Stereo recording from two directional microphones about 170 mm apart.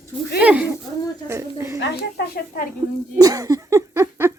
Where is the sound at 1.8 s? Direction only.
80° left.